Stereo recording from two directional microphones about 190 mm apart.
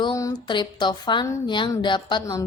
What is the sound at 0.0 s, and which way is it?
Speech, 20° left (ahead or behind).